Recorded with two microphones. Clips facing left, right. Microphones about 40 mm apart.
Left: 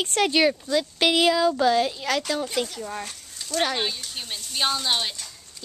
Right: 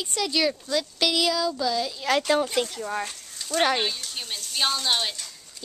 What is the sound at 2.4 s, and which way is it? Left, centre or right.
Speech, centre.